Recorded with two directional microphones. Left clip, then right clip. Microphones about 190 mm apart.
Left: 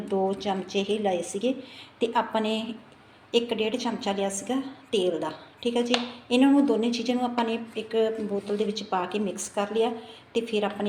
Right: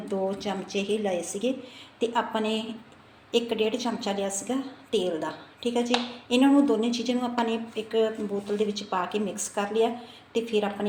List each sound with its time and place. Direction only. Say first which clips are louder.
0.1 s a woman's voice: left 3 dB; 10° left (ahead or behind)
3.3 s a woman's voice: even; 10° left (ahead or behind)